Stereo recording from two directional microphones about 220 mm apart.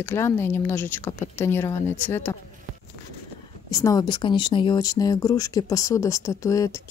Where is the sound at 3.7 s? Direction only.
15° left (ahead or behind).